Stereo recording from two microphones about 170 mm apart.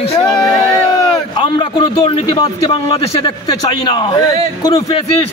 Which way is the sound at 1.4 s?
30° left (ahead or behind).